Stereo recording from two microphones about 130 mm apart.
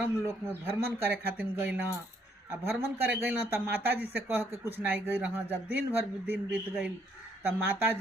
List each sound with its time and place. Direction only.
0.0 s speech: 20° right (ahead or behind)